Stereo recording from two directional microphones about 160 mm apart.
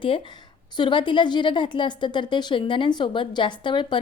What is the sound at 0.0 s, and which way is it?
A woman's voice, 30° left (ahead or behind).